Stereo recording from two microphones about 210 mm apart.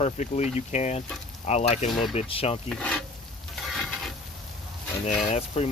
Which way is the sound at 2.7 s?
5° left (ahead or behind).